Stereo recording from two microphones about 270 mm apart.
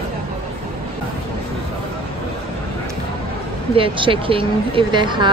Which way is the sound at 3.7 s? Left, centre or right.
Centre.